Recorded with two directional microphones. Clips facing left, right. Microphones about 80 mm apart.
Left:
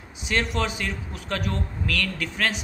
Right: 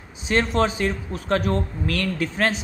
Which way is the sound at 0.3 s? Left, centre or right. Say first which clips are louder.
Right 5 dB; right.